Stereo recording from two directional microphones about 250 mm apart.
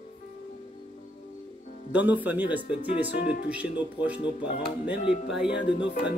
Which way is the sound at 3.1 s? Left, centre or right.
Left.